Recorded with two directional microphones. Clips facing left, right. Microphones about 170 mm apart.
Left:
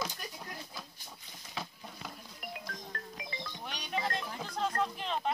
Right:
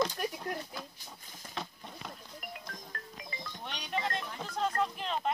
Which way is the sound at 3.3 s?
Centre (ahead or behind).